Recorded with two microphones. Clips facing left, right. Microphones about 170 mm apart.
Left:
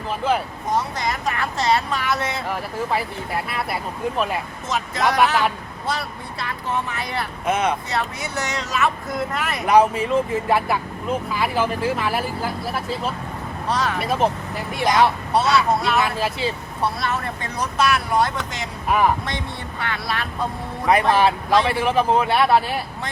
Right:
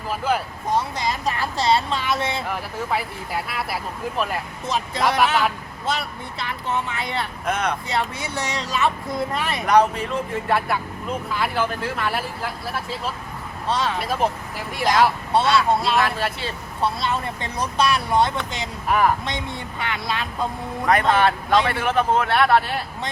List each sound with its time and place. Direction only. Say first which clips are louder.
0.1 s speech: left 1 dB; centre (ahead or behind)
0.9 s a woman's voice: even; 25° right (ahead or behind)
2.5 s speech: left 2 dB; centre (ahead or behind)
6.7 s a woman's voice: even; 25° right (ahead or behind)
7.4 s speech: left 4 dB; 5° left (ahead or behind)
8.5 s a woman's voice: even; 30° right (ahead or behind)
9.6 s speech: left 2 dB; 5° left (ahead or behind)
13.7 s a woman's voice: even; 25° right (ahead or behind)
14.0 s speech: left 2 dB; centre (ahead or behind)
16.8 s a woman's voice: even; 25° right (ahead or behind)
18.9 s speech: left 1 dB; centre (ahead or behind)
19.8 s a woman's voice: even; 20° right (ahead or behind)
21.1 s speech: left 1 dB; centre (ahead or behind)